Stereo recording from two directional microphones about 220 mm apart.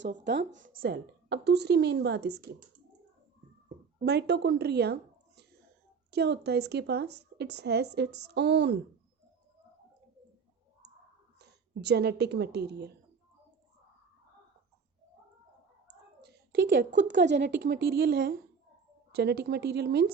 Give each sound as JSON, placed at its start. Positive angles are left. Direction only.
{"t": 0.0, "sound": "speech", "side_deg": -50}
{"t": 4.0, "sound": "speech", "side_deg": -50}
{"t": 6.1, "sound": "speech", "side_deg": -50}
{"t": 11.3, "sound": "a woman's voice", "side_deg": -50}
{"t": 16.2, "sound": "speech", "side_deg": -50}